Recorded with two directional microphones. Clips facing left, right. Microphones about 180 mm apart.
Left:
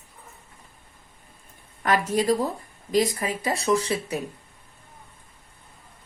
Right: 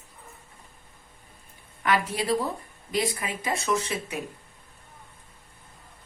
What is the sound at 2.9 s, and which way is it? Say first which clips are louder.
Speech: left 5 dB; 40° left (ahead or behind).